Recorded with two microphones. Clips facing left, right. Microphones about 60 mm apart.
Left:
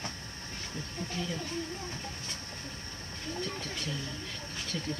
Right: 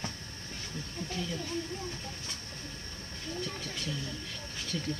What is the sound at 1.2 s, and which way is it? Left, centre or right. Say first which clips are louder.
Speech: left 1 dB; centre.